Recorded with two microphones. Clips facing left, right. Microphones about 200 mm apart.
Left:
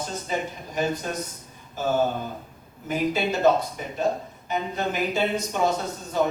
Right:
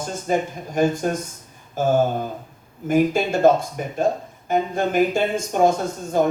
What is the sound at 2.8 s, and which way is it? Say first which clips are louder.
Speech: right 6 dB; 50° right (ahead or behind).